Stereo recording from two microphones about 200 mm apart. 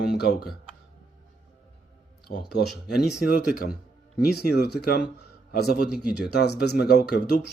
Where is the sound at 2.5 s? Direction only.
55° left (ahead or behind).